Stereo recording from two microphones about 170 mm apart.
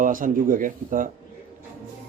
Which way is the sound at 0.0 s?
55° right (ahead or behind).